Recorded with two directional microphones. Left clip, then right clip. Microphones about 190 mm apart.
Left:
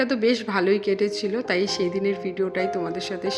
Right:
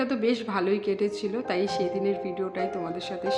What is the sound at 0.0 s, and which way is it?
A woman's voice, 10° left (ahead or behind).